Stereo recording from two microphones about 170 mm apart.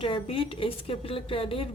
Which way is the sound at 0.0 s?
30° left (ahead or behind).